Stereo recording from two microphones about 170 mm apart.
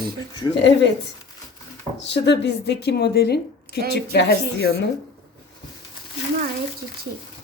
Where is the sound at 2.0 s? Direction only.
90° left.